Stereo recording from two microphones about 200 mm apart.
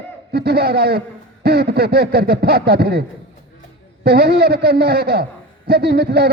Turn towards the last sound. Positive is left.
turn(degrees=-50)  # may be behind; listen again after turning